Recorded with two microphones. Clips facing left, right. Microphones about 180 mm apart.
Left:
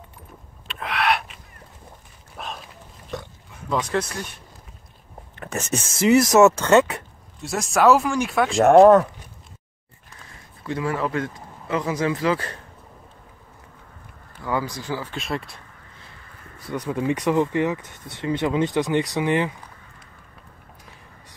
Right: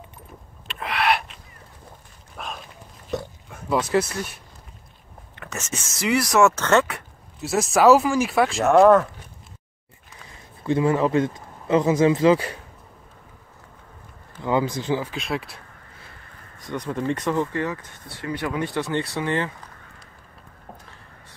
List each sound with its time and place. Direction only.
0.7 s a sound: centre (ahead or behind)
3.7 s speech: 5° right (ahead or behind)
5.9 s speech: 25° left (ahead or behind)
6.3 s speech: 15° left (ahead or behind)
7.4 s speech: centre (ahead or behind)
8.7 s speech: 25° left (ahead or behind)
10.6 s speech: 25° right (ahead or behind)
14.4 s speech: 20° right (ahead or behind)
15.0 s speech: centre (ahead or behind)
16.7 s speech: 10° left (ahead or behind)